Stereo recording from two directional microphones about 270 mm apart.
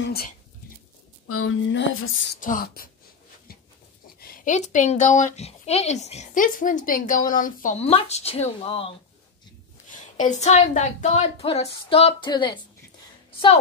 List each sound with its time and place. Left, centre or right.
0.0 s speech: left
1.2 s a sound: left
2.4 s speech: left
4.2 s speech: left